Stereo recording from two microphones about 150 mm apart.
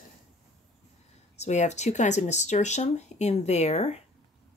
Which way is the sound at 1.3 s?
50° left (ahead or behind).